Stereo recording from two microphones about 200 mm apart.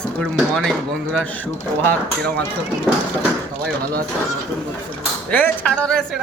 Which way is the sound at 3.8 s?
50° right (ahead or behind).